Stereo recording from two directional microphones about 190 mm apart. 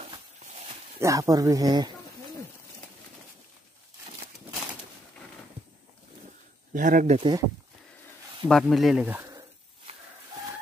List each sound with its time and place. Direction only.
0.9 s speech: 15° right (ahead or behind)
6.7 s speech: 45° right (ahead or behind)
7.2 s speech: 25° right (ahead or behind)
8.5 s speech: centre (ahead or behind); by 9.5 s 15° right (ahead or behind)